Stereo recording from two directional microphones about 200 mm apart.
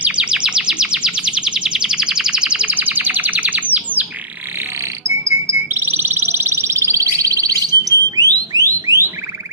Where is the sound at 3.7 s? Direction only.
10° right (ahead or behind).